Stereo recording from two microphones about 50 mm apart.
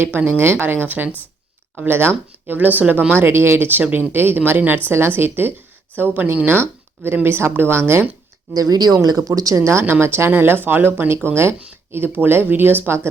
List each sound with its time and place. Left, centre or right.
0.3 s speech: right
1.9 s speech: right
2.6 s speech: right
3.1 s speech: right
3.7 s speech: right
8.6 s speech: right
9.8 s speech: right
10.3 s speech: right
11.1 s speech: right